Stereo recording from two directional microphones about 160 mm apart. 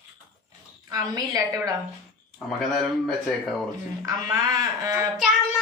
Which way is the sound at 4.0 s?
20° right (ahead or behind).